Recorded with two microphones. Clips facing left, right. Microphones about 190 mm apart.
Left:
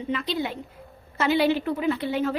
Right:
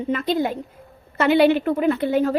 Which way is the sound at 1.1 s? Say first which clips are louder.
Right 6 dB; 60° right (ahead or behind).